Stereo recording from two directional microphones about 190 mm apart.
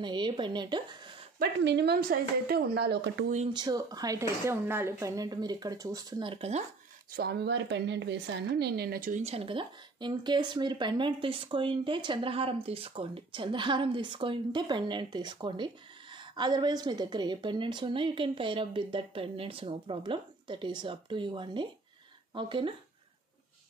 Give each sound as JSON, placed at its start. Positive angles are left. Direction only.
{"t": 0.0, "sound": "speech", "side_deg": -25}
{"t": 1.4, "sound": "a woman's voice", "side_deg": -65}
{"t": 3.5, "sound": "speech", "side_deg": -20}
{"t": 7.1, "sound": "a woman's voice", "side_deg": -55}
{"t": 9.2, "sound": "speech", "side_deg": -30}